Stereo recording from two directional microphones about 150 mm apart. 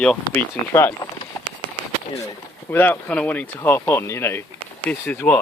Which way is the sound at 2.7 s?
10° left (ahead or behind).